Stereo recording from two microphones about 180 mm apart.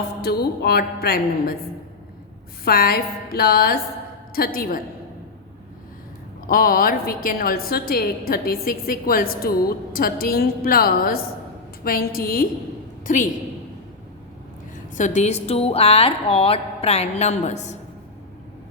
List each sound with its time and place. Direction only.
0.2 s a woman's voice: 60° left (ahead or behind)
2.6 s a woman's voice: 55° left (ahead or behind)
6.5 s a woman's voice: 55° left (ahead or behind)
14.9 s a woman's voice: 40° left (ahead or behind)